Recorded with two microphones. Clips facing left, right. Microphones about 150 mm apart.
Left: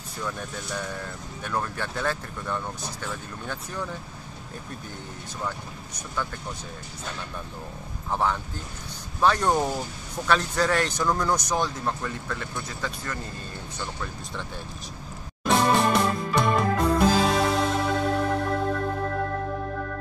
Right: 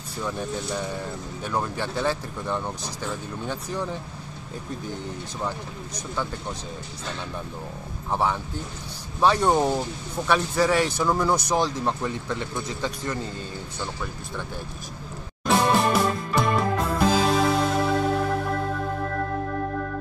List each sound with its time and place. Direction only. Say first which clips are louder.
0.2 s speech: right 4 dB; 20° right (ahead or behind)
8.1 s speech: right 1 dB; 15° right (ahead or behind)
15.4 s music: right 1 dB; centre (ahead or behind)